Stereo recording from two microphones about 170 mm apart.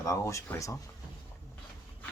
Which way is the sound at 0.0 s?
20° left (ahead or behind).